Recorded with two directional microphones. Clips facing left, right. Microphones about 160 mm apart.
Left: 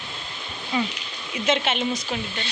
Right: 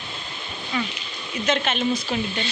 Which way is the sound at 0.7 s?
25° left (ahead or behind).